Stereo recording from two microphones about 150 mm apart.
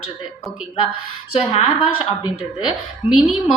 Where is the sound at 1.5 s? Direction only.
35° left (ahead or behind).